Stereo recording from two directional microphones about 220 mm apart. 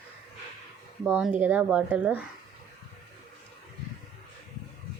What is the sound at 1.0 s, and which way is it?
A woman's voice, 5° right (ahead or behind).